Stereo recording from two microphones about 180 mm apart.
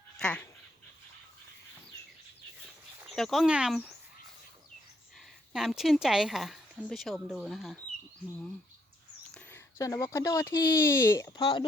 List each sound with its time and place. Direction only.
0.2 s speech: 5° left (ahead or behind)
3.2 s a woman's voice: centre (ahead or behind)
5.5 s a woman's voice: centre (ahead or behind)
9.3 s speech: 10° left (ahead or behind)